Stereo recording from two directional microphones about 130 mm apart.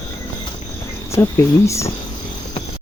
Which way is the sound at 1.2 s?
20° left (ahead or behind).